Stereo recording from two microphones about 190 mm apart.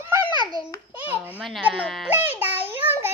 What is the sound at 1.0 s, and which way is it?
Speech, 10° right (ahead or behind).